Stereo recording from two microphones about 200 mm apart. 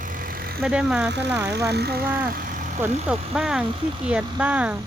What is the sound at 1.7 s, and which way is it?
Speech, 55° right (ahead or behind).